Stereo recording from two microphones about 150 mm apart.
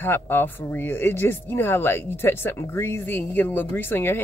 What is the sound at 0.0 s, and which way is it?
Speech, 15° left (ahead or behind).